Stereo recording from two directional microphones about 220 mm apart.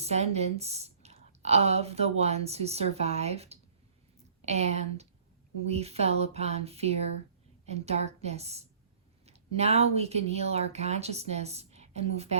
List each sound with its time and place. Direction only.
0.0 s a woman's voice: 30° right (ahead or behind)